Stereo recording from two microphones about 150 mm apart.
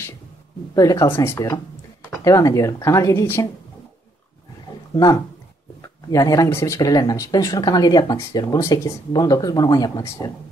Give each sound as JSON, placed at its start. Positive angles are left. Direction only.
{"t": 0.7, "sound": "speech", "side_deg": 25}
{"t": 4.9, "sound": "speech", "side_deg": 25}